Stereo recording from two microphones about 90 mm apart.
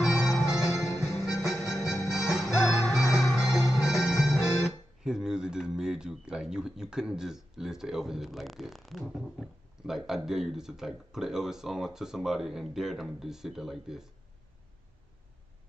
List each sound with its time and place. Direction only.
0.2 s music: 5° right (ahead or behind)
1.0 s music: 35° left (ahead or behind)
1.4 s music: centre (ahead or behind)
3.3 s speech: 5° right (ahead or behind)